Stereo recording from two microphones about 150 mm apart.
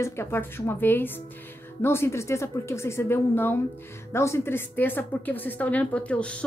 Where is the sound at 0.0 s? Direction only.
15° left (ahead or behind).